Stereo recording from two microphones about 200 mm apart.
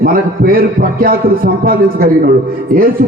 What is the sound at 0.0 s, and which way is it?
A man's voice, 45° right (ahead or behind).